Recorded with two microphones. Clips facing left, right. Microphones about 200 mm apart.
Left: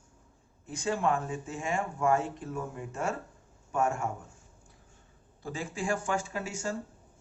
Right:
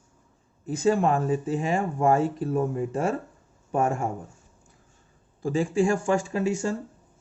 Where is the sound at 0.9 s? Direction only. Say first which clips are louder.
Right 2 dB; 90° right.